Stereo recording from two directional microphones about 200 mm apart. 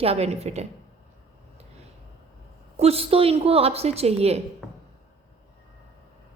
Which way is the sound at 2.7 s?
30° right (ahead or behind).